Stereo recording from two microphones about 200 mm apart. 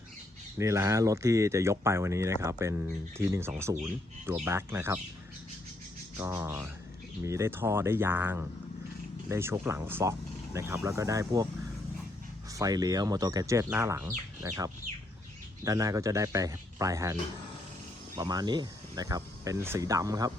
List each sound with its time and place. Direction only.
0.6 s speech: 15° right (ahead or behind)
6.1 s speech: 10° right (ahead or behind)
12.5 s speech: 20° right (ahead or behind)
18.2 s speech: 20° right (ahead or behind)